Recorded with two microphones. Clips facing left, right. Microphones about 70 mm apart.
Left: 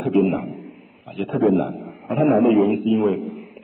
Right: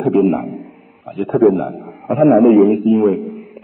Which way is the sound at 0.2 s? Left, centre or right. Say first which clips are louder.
Right 5 dB; right.